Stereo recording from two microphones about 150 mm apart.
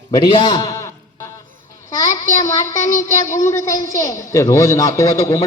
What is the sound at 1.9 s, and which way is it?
Speech, 20° left (ahead or behind).